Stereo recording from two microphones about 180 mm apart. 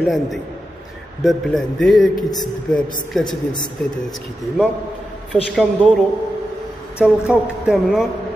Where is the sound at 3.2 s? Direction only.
25° left (ahead or behind).